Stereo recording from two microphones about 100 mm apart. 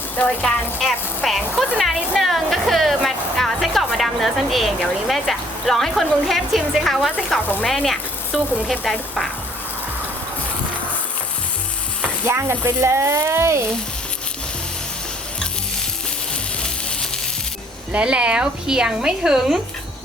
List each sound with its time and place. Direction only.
0.8 s a woman's voice: centre (ahead or behind)
7.6 s sizzle: centre (ahead or behind)
8.8 s a woman's voice: 5° left (ahead or behind)
12.2 s speech: 30° right (ahead or behind)
17.9 s a woman's voice: 10° right (ahead or behind)